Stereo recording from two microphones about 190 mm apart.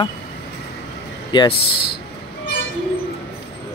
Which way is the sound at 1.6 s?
55° left (ahead or behind).